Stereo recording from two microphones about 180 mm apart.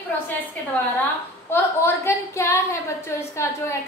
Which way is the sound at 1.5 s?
15° left (ahead or behind).